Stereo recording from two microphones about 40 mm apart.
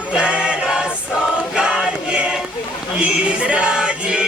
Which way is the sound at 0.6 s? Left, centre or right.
Centre.